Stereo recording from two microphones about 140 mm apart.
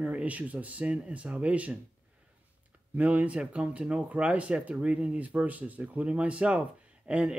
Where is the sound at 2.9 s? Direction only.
10° right (ahead or behind).